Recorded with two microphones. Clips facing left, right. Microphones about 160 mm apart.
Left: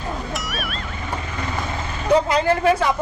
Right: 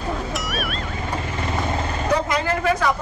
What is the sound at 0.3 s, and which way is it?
Music, centre (ahead or behind).